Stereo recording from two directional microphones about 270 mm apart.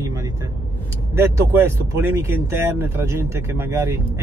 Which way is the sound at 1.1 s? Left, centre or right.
Centre.